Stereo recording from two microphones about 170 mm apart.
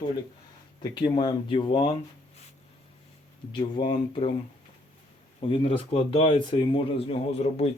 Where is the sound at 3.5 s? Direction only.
30° left (ahead or behind).